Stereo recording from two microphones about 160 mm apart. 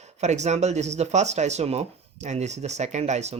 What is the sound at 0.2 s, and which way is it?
Speech, 45° right (ahead or behind).